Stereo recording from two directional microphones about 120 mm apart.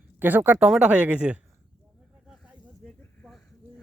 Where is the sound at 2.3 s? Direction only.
5° right (ahead or behind).